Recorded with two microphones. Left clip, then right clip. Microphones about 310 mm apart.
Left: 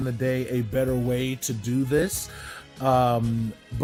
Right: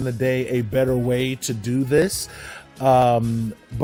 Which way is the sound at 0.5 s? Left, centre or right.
Right.